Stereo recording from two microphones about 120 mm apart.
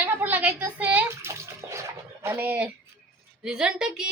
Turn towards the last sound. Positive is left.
turn(degrees=-5)  # may be behind; listen again after turning